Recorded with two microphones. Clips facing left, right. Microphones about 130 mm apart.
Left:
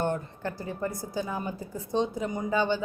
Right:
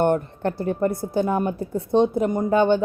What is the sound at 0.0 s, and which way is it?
A woman's voice, 60° right (ahead or behind).